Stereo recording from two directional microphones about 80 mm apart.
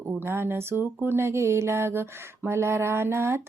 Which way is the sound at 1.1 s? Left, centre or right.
Right.